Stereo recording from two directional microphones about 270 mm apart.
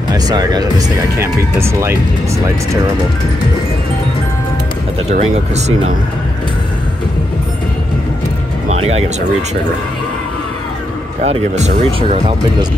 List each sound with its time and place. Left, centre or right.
0.1 s speech: centre
5.1 s speech: right
8.6 s music: right
11.2 s speech: right